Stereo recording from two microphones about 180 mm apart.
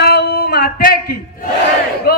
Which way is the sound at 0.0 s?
60° left (ahead or behind).